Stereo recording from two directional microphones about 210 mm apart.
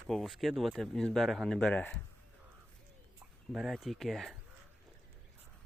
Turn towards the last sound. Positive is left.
turn(degrees=0)  # may be behind; listen again after turning